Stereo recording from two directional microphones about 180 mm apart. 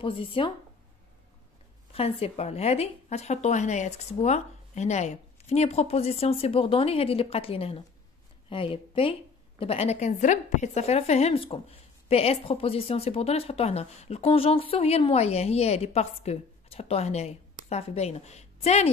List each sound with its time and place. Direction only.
0.0 s a woman's voice: 30° left (ahead or behind)
1.9 s a woman's voice: 30° left (ahead or behind)